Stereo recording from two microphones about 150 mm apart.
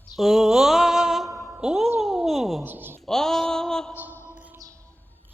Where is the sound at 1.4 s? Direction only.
5° right (ahead or behind).